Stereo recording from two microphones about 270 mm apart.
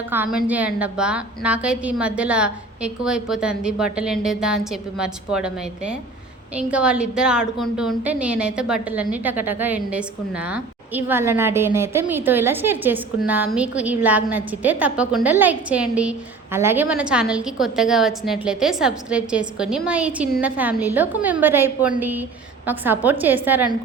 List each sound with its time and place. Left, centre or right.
0.1 s a woman's voice: centre